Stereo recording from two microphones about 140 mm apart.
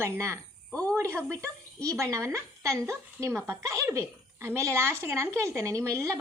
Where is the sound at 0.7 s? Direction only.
10° left (ahead or behind).